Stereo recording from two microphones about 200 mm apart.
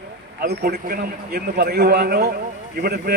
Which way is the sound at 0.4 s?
50° right (ahead or behind).